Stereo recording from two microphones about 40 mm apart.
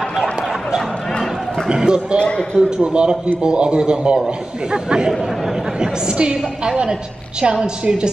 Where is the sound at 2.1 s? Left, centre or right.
Left.